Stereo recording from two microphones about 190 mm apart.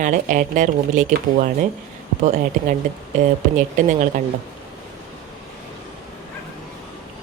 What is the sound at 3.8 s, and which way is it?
Speech, 40° right (ahead or behind).